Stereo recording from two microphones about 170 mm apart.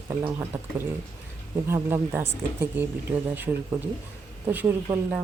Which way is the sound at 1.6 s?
15° right (ahead or behind).